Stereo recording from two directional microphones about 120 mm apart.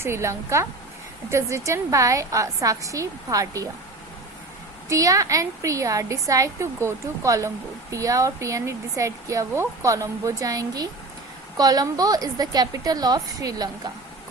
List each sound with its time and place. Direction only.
0.0 s a woman's voice: 20° right (ahead or behind)
4.9 s a woman's voice: 30° right (ahead or behind)